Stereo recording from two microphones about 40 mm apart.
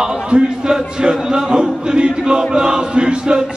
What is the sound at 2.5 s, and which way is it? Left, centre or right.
Chant, centre.